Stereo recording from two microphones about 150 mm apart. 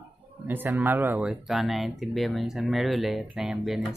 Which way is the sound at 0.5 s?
15° right (ahead or behind).